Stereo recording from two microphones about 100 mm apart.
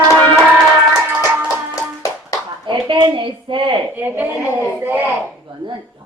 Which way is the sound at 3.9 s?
20° right (ahead or behind).